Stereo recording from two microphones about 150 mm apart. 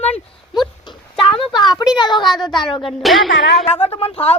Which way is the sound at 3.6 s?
40° left (ahead or behind).